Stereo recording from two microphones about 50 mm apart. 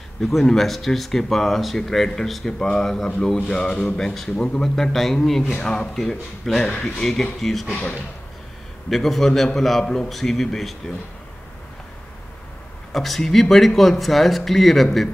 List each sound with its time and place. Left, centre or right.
0.2 s speech: centre
5.4 s speech: left
5.7 s speech: centre
8.9 s speech: centre
12.9 s speech: centre